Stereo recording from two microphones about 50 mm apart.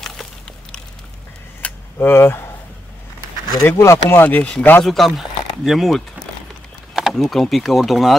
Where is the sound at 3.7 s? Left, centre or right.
Left.